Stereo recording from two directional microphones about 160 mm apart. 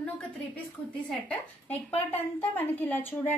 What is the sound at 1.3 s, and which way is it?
A woman's voice, 10° left (ahead or behind).